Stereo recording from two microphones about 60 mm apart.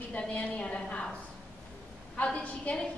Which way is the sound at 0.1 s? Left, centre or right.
Centre.